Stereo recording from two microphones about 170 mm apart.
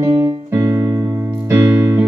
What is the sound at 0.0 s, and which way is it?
Keyboard, 15° right (ahead or behind).